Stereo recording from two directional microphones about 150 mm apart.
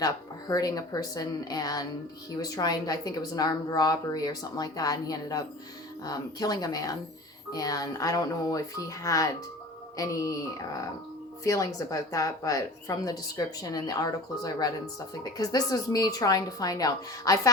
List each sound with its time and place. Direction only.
0.0 s speech: 25° left (ahead or behind)